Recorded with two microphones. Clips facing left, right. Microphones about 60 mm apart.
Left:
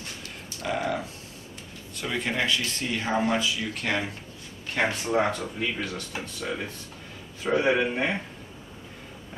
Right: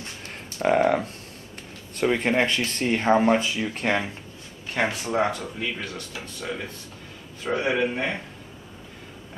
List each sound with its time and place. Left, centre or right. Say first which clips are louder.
0.2 s a sound: right 12 dB; right
2.0 s speech: right 7 dB; right
4.7 s speech: right 1 dB; centre